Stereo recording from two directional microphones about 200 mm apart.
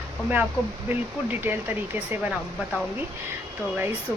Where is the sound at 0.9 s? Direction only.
10° right (ahead or behind).